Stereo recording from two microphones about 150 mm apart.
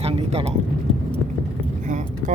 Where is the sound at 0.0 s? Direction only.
40° right (ahead or behind).